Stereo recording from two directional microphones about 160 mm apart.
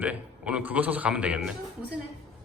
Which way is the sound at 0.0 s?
10° right (ahead or behind).